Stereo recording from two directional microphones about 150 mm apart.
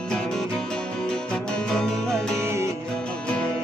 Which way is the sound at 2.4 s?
20° right (ahead or behind).